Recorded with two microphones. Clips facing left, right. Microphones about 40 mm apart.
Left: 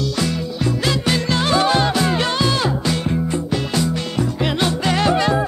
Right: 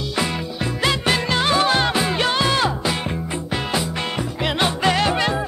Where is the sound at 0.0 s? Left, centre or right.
Right.